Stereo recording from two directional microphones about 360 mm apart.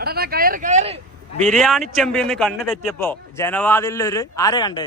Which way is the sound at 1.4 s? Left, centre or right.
Centre.